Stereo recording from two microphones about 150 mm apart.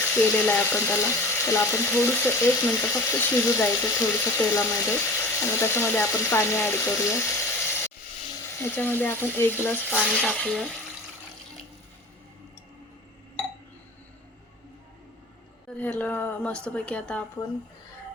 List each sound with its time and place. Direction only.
0.0 s speech: 15° left (ahead or behind)
6.6 s frying: 15° left (ahead or behind)
8.7 s speech: 10° left (ahead or behind)
15.8 s speech: 10° left (ahead or behind)